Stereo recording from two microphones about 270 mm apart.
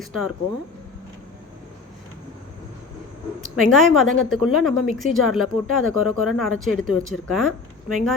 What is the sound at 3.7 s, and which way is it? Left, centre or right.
A woman's voice, centre.